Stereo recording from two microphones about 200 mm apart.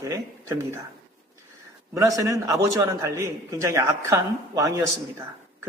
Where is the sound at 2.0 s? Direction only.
15° right (ahead or behind).